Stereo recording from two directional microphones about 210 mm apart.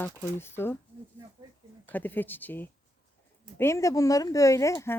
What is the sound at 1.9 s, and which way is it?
A woman's voice, 10° left (ahead or behind).